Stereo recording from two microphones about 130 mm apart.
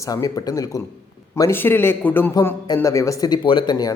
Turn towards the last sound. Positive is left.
turn(degrees=30)  # may be behind; listen again after turning